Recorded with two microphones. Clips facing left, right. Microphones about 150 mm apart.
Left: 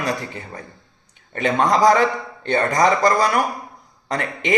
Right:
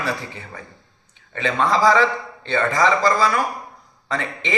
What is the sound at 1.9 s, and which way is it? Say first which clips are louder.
Speech: left 1 dB; 50° left (ahead or behind).